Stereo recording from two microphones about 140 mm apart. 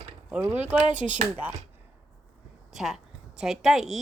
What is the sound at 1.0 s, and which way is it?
Speech, 60° right (ahead or behind).